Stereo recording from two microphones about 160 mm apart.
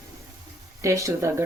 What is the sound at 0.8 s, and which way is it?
Speech, 20° right (ahead or behind).